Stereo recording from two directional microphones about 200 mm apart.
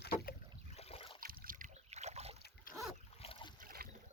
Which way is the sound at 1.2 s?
45° right (ahead or behind).